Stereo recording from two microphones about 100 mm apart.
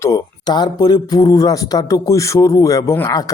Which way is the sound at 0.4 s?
45° left (ahead or behind).